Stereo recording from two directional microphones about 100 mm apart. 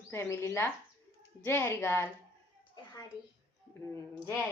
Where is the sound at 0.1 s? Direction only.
30° left (ahead or behind).